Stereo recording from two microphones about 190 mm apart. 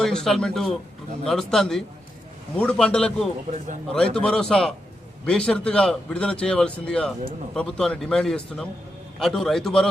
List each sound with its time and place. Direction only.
0.0 s a man's voice: 5° left (ahead or behind)